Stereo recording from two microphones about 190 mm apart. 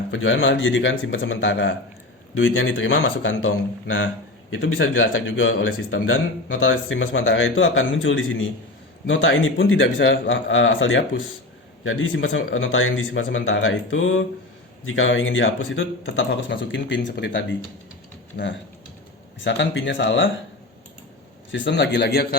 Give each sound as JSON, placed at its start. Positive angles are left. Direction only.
{"t": 0.1, "sound": "a man's voice", "side_deg": 90}
{"t": 19.5, "sound": "speech", "side_deg": 70}
{"t": 21.5, "sound": "a man's voice", "side_deg": 70}